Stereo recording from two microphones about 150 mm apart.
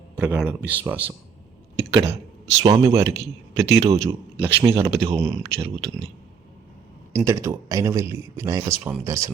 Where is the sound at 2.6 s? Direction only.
20° right (ahead or behind).